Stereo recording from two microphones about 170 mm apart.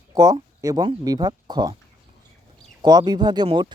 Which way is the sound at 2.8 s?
25° right (ahead or behind).